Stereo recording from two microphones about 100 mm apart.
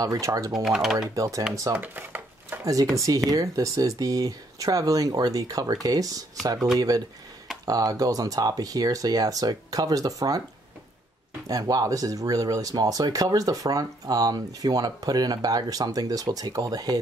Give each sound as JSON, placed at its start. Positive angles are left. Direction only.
{"t": 0.0, "sound": "speech", "side_deg": -35}
{"t": 0.5, "sound": "speech", "side_deg": -5}
{"t": 1.1, "sound": "speech", "side_deg": -35}
{"t": 1.8, "sound": "dishes", "side_deg": -20}
{"t": 2.6, "sound": "speech", "side_deg": -35}
{"t": 11.4, "sound": "speech", "side_deg": -40}